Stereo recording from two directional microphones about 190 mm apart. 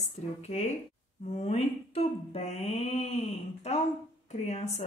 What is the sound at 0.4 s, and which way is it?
A woman's voice, 35° left (ahead or behind).